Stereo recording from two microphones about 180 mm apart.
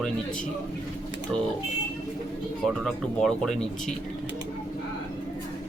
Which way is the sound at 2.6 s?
Centre (ahead or behind).